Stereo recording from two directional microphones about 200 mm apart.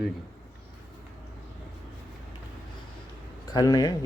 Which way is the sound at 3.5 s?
20° left (ahead or behind).